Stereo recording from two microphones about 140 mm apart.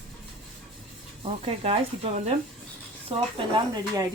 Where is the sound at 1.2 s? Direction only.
45° right (ahead or behind).